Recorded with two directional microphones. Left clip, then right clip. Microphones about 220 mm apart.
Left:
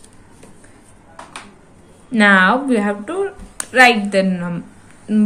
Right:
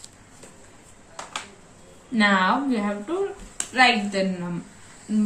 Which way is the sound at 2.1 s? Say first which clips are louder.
Left 8 dB; 45° left (ahead or behind).